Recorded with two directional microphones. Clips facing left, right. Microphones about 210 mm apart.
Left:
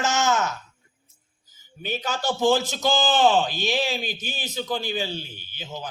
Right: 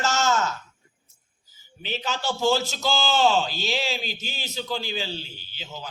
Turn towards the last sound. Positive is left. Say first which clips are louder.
# left 3 dB
turn(degrees=15)  # may be behind; listen again after turning